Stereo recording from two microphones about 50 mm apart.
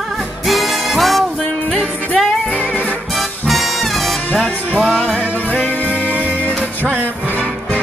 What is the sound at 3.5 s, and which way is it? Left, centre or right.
Music, centre.